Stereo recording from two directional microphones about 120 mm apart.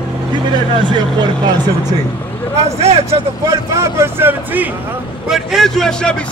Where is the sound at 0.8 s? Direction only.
40° right (ahead or behind).